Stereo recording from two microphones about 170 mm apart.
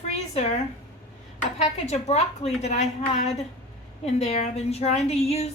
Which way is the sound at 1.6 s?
40° left (ahead or behind).